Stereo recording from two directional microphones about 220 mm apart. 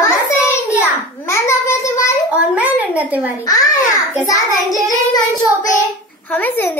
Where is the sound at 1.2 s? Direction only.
10° left (ahead or behind).